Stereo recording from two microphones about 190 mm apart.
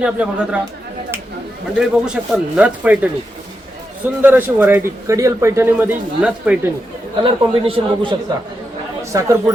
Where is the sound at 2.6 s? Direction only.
5° right (ahead or behind).